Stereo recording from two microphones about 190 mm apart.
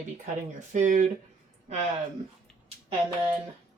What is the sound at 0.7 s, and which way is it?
Speech, 40° right (ahead or behind).